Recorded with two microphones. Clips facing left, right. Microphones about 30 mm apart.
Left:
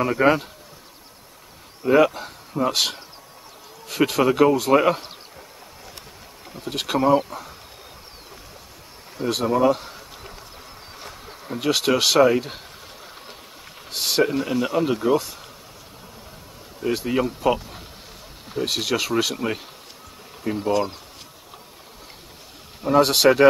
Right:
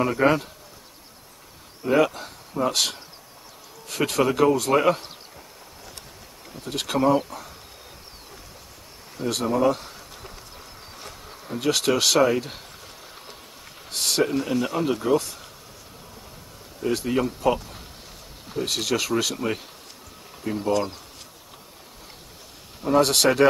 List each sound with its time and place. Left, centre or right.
0.0 s speech: centre
1.9 s speech: centre
6.5 s speech: centre
9.1 s a sound: centre
11.0 s speech: centre
13.8 s speech: centre
16.8 s speech: centre
22.8 s speech: centre